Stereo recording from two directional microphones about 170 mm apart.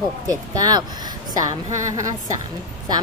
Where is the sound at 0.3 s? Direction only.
20° right (ahead or behind).